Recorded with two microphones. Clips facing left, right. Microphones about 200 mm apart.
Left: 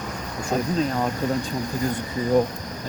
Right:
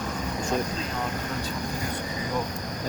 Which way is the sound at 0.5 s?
35° left (ahead or behind).